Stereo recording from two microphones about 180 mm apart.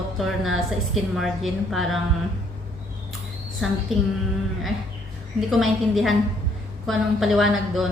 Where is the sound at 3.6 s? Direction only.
Centre (ahead or behind).